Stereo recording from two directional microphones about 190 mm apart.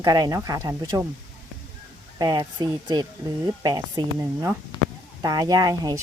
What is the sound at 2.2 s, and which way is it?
Speech, 20° right (ahead or behind).